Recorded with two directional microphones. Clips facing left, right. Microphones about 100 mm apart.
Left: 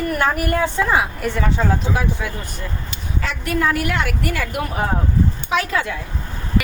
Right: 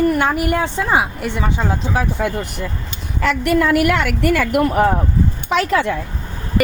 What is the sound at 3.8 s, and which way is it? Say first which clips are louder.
A woman's voice: right 6 dB; 65° right (ahead or behind).